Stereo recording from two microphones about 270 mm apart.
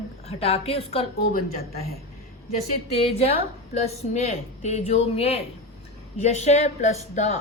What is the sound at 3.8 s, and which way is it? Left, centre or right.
A woman's voice, left.